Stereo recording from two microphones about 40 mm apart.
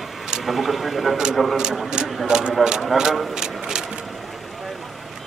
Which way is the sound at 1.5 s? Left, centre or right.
Centre.